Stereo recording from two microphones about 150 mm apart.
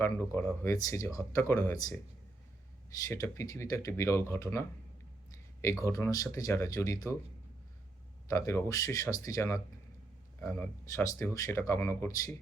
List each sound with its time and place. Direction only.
0.0 s speech: 15° left (ahead or behind)
3.1 s speech: 20° left (ahead or behind)
5.6 s speech: 20° left (ahead or behind)
8.3 s speech: 20° left (ahead or behind)